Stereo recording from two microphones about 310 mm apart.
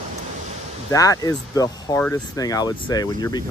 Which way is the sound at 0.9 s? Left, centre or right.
Centre.